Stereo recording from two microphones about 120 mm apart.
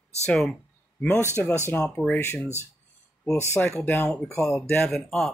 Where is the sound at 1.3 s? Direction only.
20° left (ahead or behind).